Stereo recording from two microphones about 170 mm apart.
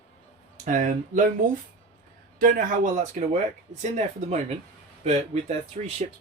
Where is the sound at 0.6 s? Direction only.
50° right (ahead or behind).